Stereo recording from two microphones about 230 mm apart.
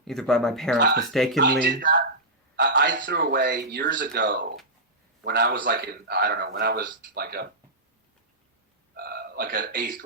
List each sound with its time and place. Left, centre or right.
0.0 s speech: centre
1.4 s a man's voice: right
3.9 s a man's voice: right
9.0 s a man's voice: right